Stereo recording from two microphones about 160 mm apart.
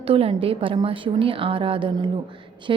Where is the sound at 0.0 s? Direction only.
35° right (ahead or behind).